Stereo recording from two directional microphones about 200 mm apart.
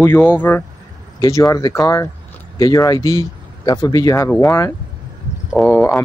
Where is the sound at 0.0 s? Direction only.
10° left (ahead or behind).